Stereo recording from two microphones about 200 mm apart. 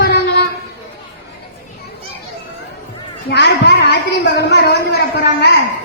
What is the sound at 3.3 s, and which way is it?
A woman's voice, 60° left (ahead or behind).